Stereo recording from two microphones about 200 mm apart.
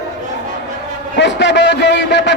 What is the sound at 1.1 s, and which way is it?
A man's voice, 60° left (ahead or behind).